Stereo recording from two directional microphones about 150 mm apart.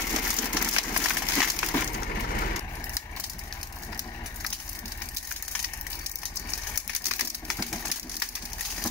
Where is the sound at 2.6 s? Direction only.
20° left (ahead or behind).